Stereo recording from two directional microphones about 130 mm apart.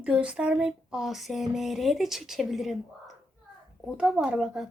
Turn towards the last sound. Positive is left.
turn(degrees=-5)  # may be behind; listen again after turning